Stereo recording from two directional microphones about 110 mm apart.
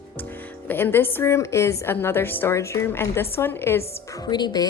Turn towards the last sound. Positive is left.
turn(degrees=40)  # may be behind; listen again after turning